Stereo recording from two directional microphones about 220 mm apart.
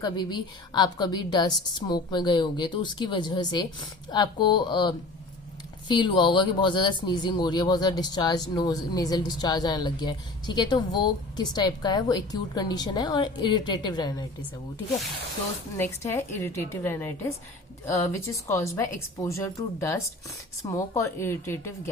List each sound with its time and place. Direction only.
0.0 s speech: 20° left (ahead or behind)
15.8 s a woman's voice: 10° left (ahead or behind)